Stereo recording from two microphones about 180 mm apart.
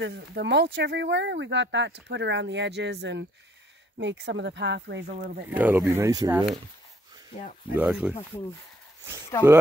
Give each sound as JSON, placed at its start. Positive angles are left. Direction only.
{"t": 0.0, "sound": "speech", "side_deg": -70}
{"t": 5.1, "sound": "speech", "side_deg": -50}
{"t": 5.6, "sound": "speech", "side_deg": -10}
{"t": 7.7, "sound": "speech", "side_deg": -5}
{"t": 9.3, "sound": "speech", "side_deg": 15}